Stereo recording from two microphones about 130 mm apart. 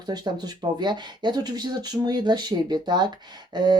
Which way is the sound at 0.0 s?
35° right (ahead or behind).